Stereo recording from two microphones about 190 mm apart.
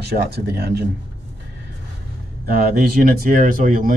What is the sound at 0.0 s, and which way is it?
Speech, 60° right (ahead or behind).